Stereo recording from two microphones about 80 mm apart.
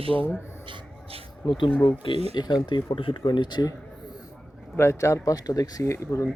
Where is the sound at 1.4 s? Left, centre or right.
Left.